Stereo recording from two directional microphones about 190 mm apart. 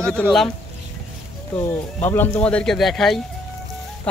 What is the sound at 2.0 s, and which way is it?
Speech, 10° left (ahead or behind).